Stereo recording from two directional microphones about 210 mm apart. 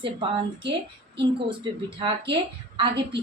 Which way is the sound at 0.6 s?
55° right (ahead or behind).